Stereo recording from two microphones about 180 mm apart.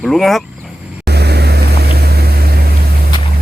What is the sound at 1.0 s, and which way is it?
Vehicle, 65° right (ahead or behind).